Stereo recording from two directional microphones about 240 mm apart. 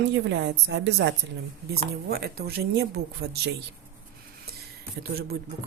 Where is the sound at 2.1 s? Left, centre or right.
Right.